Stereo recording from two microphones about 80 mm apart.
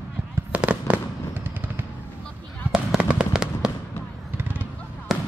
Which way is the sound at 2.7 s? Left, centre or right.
Centre.